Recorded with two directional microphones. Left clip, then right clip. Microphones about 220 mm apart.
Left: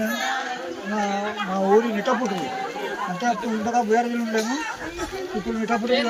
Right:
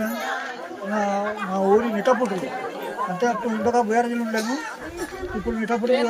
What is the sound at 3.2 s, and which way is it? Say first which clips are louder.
Speech: right 2 dB; 20° right (ahead or behind).